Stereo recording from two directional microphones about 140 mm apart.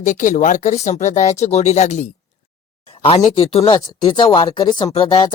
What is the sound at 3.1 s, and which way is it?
Speech, 40° left (ahead or behind).